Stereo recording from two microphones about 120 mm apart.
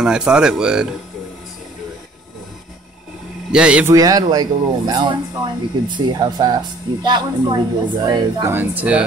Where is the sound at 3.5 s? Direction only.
10° right (ahead or behind).